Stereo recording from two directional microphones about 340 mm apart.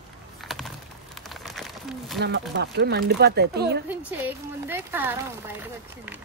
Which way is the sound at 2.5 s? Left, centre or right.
Right.